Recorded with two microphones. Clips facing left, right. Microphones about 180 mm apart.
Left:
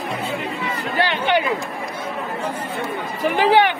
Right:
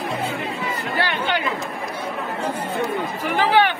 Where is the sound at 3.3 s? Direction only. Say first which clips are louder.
Left 2 dB; 15° left (ahead or behind).